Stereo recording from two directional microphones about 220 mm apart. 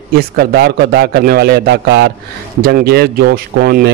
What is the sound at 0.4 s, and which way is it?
A man's voice, 45° right (ahead or behind).